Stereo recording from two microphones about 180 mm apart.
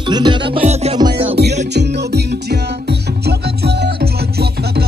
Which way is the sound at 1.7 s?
70° right (ahead or behind).